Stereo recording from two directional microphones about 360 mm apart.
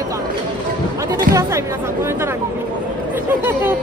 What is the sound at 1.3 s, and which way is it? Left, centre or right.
Speech, right.